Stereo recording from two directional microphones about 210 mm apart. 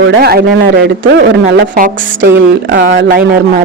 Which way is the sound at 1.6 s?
40° right (ahead or behind).